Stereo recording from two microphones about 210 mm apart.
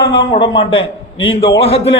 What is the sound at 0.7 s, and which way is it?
Speech, 70° left (ahead or behind).